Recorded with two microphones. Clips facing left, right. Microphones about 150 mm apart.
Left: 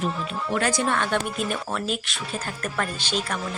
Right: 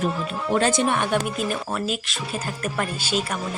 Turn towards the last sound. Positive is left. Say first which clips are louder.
# right 2 dB
turn(degrees=-5)  # may be behind; listen again after turning